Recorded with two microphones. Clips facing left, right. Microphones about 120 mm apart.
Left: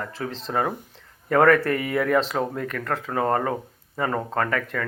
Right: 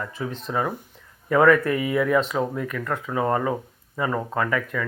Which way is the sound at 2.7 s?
65° left (ahead or behind).